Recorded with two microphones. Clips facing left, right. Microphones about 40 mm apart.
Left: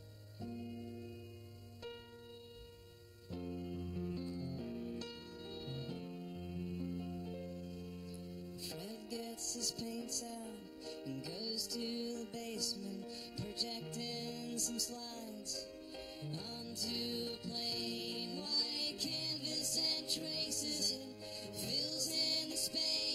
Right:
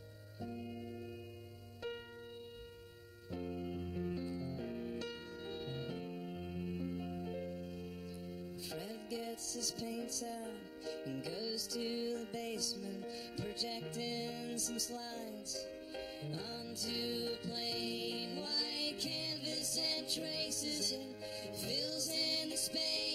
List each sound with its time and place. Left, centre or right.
0.4 s music: right
3.3 s music: right
8.7 s music: centre